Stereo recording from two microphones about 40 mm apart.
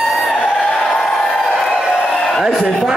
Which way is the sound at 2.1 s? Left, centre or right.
Centre.